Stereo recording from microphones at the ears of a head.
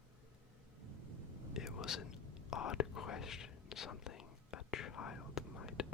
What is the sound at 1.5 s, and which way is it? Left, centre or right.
Whispering, left.